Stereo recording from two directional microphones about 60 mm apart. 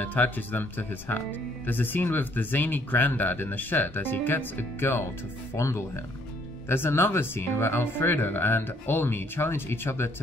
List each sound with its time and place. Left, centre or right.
0.0 s speech: left
5.6 s speech: left
6.7 s speech: left